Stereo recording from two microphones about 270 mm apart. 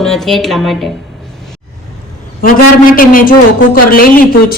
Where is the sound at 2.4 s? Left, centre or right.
Left.